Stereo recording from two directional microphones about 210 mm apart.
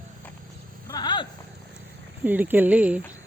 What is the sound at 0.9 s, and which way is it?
Vehicle, 20° left (ahead or behind).